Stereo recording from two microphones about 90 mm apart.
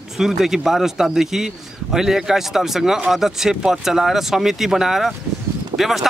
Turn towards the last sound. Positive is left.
turn(degrees=-5)  # may be behind; listen again after turning